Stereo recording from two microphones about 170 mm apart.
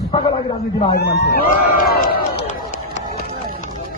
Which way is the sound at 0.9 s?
75° left (ahead or behind).